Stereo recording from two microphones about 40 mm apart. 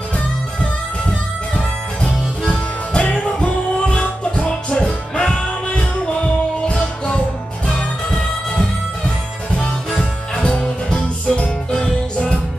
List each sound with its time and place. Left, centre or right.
2.0 s music: left
10.3 s music: left